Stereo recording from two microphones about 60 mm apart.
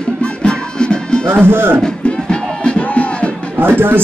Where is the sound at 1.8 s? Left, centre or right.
Centre.